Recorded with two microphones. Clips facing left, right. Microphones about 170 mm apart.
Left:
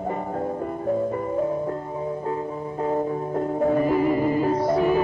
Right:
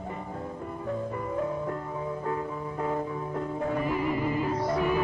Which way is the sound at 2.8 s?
40° left (ahead or behind).